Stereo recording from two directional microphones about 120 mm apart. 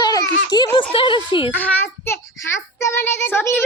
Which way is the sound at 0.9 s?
45° left (ahead or behind).